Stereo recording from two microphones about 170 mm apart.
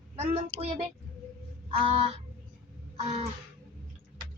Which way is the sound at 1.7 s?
35° right (ahead or behind).